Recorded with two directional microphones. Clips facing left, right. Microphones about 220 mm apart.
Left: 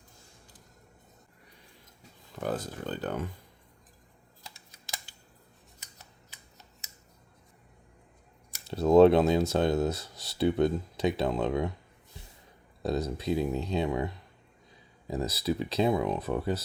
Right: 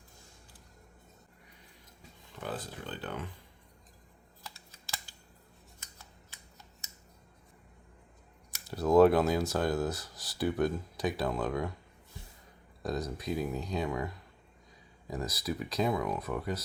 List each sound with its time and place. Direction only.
2.3 s speech: 45° left (ahead or behind)
8.6 s speech: 25° left (ahead or behind)
12.8 s speech: 30° left (ahead or behind)